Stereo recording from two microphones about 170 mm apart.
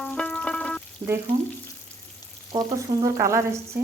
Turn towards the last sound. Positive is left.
turn(degrees=-15)  # may be behind; listen again after turning